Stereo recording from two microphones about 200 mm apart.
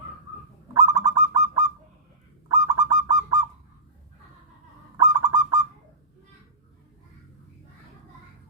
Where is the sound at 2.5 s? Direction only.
20° right (ahead or behind).